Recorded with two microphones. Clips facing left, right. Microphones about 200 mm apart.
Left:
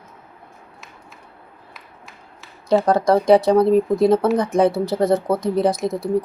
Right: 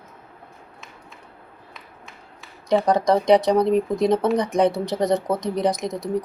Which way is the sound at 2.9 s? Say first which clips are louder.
Left 2 dB; 20° right (ahead or behind).